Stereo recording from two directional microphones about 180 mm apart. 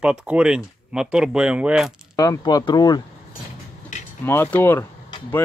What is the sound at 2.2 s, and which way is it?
Speech, 20° left (ahead or behind).